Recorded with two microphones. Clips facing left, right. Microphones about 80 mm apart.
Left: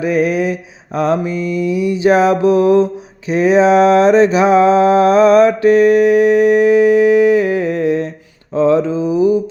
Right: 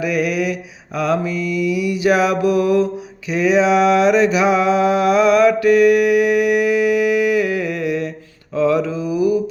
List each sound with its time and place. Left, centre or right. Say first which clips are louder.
0.0 s mantra: left 4 dB; left
3.2 s a sound: left 4 dB; left
8.5 s mantra: left 4 dB; left